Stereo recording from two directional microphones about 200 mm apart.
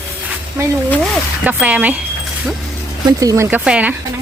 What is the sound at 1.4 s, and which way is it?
Speech, 10° right (ahead or behind).